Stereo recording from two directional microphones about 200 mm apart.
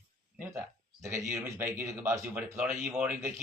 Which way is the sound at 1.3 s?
10° right (ahead or behind).